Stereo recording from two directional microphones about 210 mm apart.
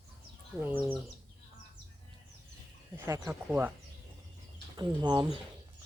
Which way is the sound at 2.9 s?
10° right (ahead or behind).